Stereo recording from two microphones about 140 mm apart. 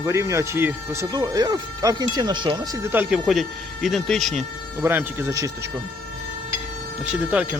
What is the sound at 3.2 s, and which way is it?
Speech, centre (ahead or behind).